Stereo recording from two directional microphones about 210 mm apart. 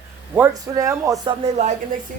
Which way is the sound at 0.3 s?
10° right (ahead or behind).